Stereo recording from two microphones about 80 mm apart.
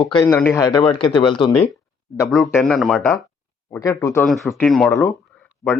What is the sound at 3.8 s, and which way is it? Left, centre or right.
Speech, left.